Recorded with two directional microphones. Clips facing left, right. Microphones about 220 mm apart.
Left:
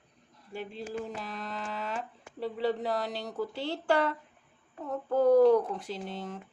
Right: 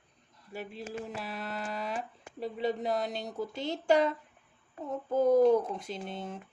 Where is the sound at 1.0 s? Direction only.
10° right (ahead or behind).